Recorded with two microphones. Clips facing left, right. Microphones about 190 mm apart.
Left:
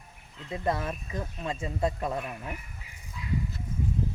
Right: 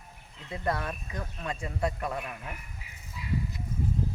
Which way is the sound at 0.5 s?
25° left (ahead or behind).